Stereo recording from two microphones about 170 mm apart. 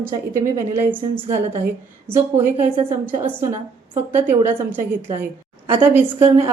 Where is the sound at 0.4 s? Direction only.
15° right (ahead or behind).